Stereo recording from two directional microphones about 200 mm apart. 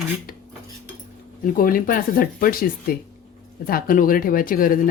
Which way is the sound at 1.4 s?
45° left (ahead or behind).